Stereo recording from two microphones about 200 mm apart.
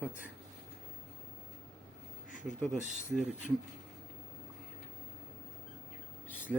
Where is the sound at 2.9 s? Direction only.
5° right (ahead or behind).